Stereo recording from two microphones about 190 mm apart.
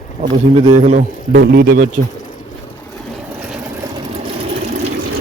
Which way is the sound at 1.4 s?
55° right (ahead or behind).